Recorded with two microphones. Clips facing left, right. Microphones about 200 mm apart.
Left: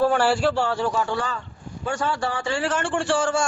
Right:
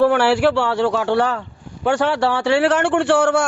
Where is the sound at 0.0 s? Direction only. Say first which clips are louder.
Right 5 dB; 65° right (ahead or behind).